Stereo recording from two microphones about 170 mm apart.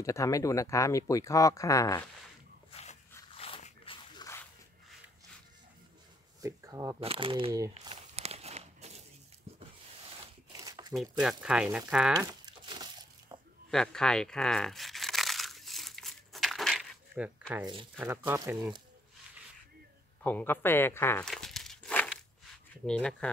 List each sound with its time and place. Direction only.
0.0 s speech: 20° left (ahead or behind)
2.7 s a sound: 40° left (ahead or behind)
6.4 s speech: 20° right (ahead or behind)
7.0 s speech: 35° right (ahead or behind)
7.9 s walk: 40° right (ahead or behind)
10.6 s a sound: 20° right (ahead or behind)
11.0 s speech: 5° right (ahead or behind)
12.3 s a sound: 25° right (ahead or behind)
13.7 s crumpling: 5° left (ahead or behind)
17.1 s a sound: 5° right (ahead or behind)
18.0 s speech: 10° right (ahead or behind)
20.2 s speech: 10° left (ahead or behind)
21.3 s crumpling: centre (ahead or behind)
22.8 s speech: 5° left (ahead or behind)